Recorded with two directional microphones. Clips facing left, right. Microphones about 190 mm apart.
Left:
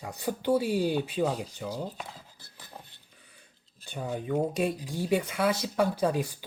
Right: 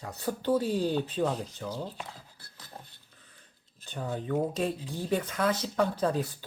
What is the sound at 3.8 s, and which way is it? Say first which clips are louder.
Speech: left 1 dB; 15° left (ahead or behind).